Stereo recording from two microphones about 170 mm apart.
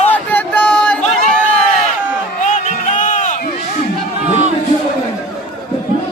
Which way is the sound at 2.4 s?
45° left (ahead or behind).